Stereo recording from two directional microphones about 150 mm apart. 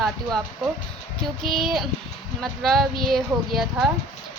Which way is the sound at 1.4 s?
Centre (ahead or behind).